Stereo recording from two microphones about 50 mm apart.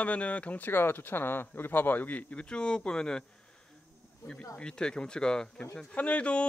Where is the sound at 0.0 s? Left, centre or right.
Left.